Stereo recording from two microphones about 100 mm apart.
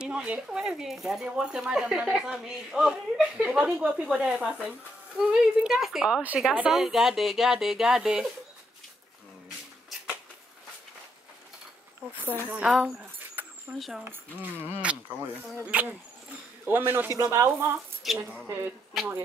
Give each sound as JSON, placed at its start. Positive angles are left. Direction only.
{"t": 0.0, "sound": "a woman's voice", "side_deg": -10}
{"t": 12.3, "sound": "speech", "side_deg": -15}
{"t": 12.6, "sound": "a woman's voice", "side_deg": -5}
{"t": 14.0, "sound": "speech", "side_deg": -20}
{"t": 18.0, "sound": "a woman's voice", "side_deg": 0}